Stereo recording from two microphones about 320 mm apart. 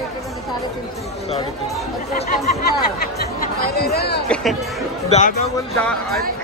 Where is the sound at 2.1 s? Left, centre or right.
Centre.